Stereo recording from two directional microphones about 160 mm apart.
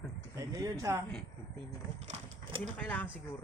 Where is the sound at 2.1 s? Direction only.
45° right (ahead or behind).